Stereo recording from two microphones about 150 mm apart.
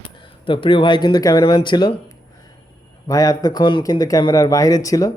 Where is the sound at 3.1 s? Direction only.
25° left (ahead or behind).